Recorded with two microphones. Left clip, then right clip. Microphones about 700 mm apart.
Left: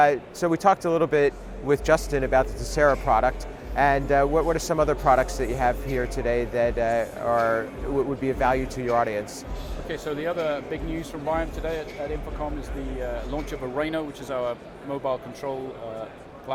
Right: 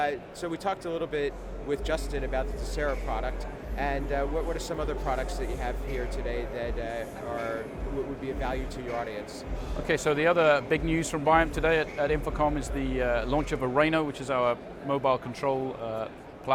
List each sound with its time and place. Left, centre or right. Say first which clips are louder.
0.0 s a man's voice: left 10 dB; left
9.8 s speech: right 5 dB; right